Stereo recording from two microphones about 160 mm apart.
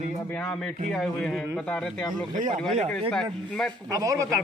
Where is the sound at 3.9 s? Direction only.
20° right (ahead or behind).